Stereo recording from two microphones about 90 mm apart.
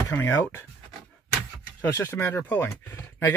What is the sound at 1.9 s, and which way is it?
Speech, 30° left (ahead or behind).